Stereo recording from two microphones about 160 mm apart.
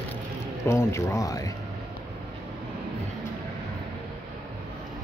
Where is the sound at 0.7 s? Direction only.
15° left (ahead or behind).